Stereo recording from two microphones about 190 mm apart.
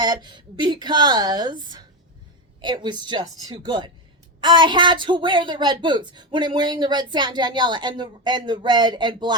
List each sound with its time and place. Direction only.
0.0 s a woman's voice: 25° right (ahead or behind)